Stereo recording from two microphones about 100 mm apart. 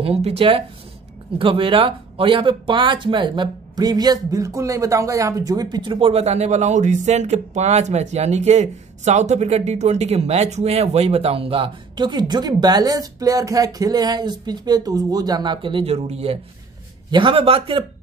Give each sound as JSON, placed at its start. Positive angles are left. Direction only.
{"t": 0.0, "sound": "speech", "side_deg": -85}
{"t": 17.1, "sound": "a man's voice", "side_deg": -60}